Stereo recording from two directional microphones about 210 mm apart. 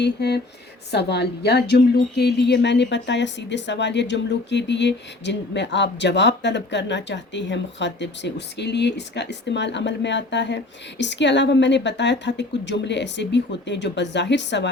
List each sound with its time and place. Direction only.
0.0 s a woman's voice: 50° left (ahead or behind)